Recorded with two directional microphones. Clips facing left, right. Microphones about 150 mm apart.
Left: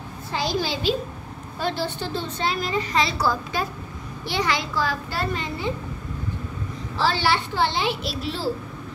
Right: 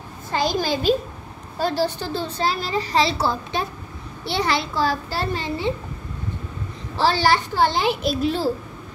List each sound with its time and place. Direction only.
0.3 s a child's voice: 50° right (ahead or behind); by 5.7 s 30° right (ahead or behind)
7.0 s a child's voice: 40° right (ahead or behind)